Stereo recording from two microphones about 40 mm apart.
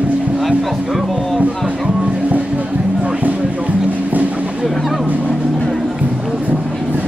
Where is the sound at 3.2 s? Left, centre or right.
Right.